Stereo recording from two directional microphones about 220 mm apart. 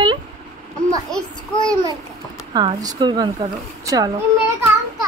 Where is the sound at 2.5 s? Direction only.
20° right (ahead or behind).